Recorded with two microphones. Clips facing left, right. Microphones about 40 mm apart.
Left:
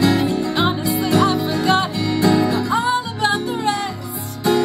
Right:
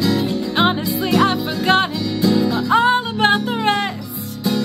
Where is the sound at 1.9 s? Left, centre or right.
Left.